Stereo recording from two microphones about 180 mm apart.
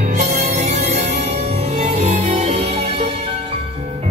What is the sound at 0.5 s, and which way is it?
Music, 35° right (ahead or behind).